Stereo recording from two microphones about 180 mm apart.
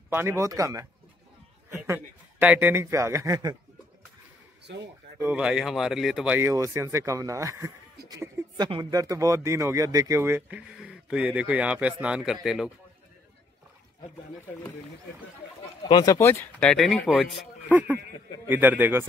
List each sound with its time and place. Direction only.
0.1 s speech: 10° right (ahead or behind)
1.7 s a sound: 15° right (ahead or behind)
2.4 s speech: 10° right (ahead or behind)
5.2 s speech: 5° right (ahead or behind)
15.9 s speech: 20° left (ahead or behind); by 19.0 s 10° right (ahead or behind)